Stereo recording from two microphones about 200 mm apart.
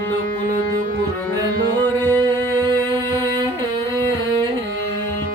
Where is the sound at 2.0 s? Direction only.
15° right (ahead or behind).